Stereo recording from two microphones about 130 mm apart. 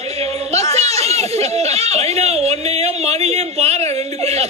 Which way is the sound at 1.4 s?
55° right (ahead or behind).